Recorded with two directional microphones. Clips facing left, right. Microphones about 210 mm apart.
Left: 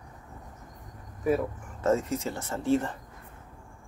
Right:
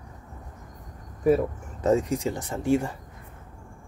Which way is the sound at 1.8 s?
15° right (ahead or behind).